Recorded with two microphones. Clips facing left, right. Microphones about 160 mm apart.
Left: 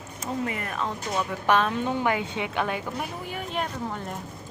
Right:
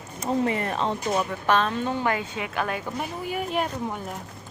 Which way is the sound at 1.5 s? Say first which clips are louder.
Left 1 dB; 10° left (ahead or behind).